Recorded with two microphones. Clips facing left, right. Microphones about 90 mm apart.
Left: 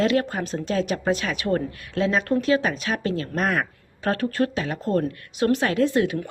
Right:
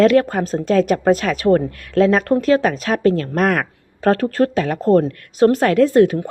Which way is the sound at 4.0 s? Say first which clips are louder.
Right 7 dB; 40° right (ahead or behind).